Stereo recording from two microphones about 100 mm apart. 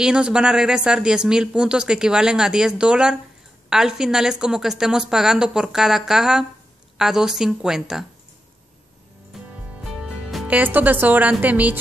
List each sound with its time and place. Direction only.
0.0 s a woman's voice: 10° right (ahead or behind)
9.3 s music: 5° right (ahead or behind)
9.9 s a woman's voice: 5° right (ahead or behind)